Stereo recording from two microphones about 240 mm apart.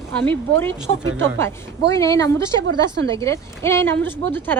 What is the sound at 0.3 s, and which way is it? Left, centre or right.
A woman's voice, centre.